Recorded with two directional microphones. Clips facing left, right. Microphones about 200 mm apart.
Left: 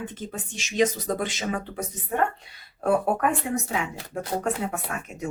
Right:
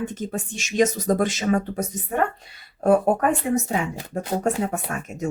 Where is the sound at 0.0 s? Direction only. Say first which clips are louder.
Right 6 dB; 45° right (ahead or behind).